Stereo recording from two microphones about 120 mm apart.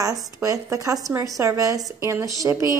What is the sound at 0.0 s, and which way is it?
Speech, 30° right (ahead or behind).